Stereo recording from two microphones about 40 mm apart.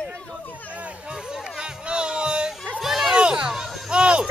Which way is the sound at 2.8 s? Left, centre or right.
Centre.